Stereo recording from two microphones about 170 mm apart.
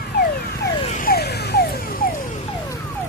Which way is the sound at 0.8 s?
45° left (ahead or behind).